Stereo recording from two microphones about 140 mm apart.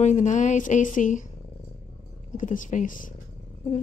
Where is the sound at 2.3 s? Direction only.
65° left (ahead or behind).